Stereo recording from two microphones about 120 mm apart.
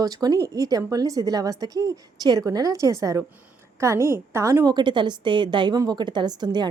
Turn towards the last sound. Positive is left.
turn(degrees=-35)  # may be behind; listen again after turning